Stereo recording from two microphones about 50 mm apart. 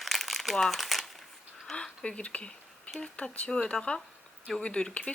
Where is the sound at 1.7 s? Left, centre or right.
Centre.